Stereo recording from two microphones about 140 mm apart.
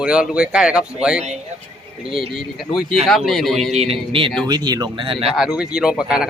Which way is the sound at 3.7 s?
50° right (ahead or behind).